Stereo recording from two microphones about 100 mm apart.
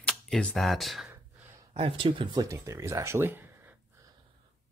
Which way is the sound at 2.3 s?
30° right (ahead or behind).